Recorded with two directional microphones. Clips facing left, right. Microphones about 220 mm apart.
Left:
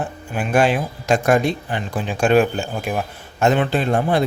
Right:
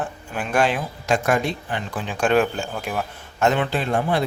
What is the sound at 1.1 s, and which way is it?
Speech, 40° left (ahead or behind).